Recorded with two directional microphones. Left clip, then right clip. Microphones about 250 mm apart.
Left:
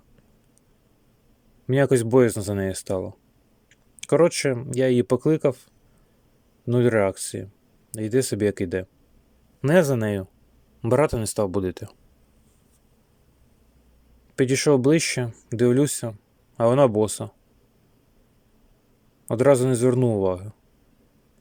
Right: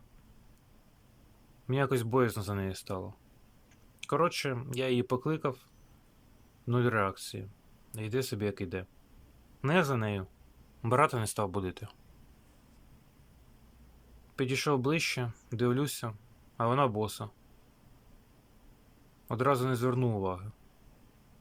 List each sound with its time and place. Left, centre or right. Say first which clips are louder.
1.6 s speech: left 11 dB; left
6.7 s speech: left 10 dB; left
14.3 s speech: left 11 dB; left
19.3 s speech: left 11 dB; left